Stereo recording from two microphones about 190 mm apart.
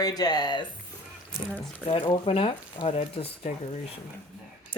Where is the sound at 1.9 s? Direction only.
25° left (ahead or behind).